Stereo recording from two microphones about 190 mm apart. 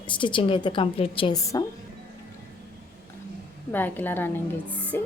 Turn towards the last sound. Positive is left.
turn(degrees=10)  # may be behind; listen again after turning